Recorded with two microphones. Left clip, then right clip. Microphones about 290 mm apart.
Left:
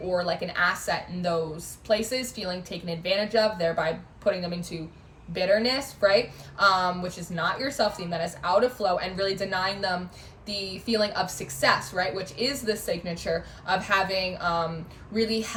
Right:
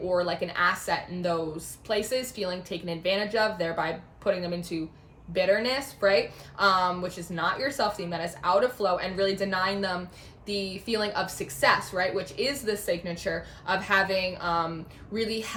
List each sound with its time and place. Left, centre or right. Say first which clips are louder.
0.1 s speech: left 1 dB; centre